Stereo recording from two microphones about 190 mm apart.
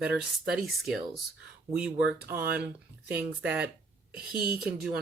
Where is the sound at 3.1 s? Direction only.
10° right (ahead or behind).